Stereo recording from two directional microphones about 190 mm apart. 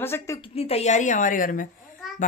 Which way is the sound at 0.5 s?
30° left (ahead or behind).